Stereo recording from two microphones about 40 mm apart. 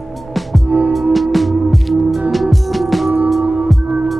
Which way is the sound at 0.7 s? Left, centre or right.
Right.